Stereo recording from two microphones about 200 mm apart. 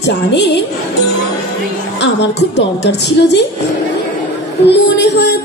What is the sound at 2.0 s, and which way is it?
A woman's voice, 60° left (ahead or behind).